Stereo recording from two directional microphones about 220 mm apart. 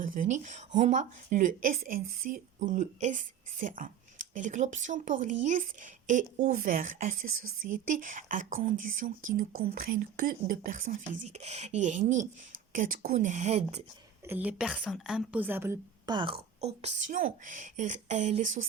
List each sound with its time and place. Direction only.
0.0 s a woman's voice: 35° right (ahead or behind)
14.3 s a woman's voice: 5° right (ahead or behind)
16.6 s a woman's voice: 30° right (ahead or behind)